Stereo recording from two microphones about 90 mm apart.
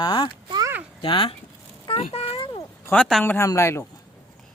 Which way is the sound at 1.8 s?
80° left.